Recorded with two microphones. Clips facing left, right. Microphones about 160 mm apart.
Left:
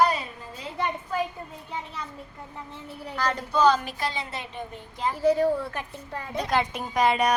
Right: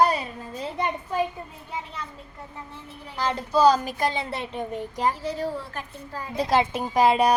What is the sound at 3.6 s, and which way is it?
Speech, 40° right (ahead or behind).